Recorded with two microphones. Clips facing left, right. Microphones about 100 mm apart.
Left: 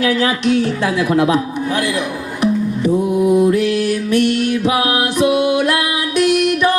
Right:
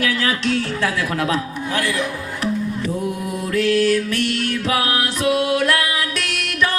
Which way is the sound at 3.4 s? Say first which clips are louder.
Left 3 dB; 15° left (ahead or behind).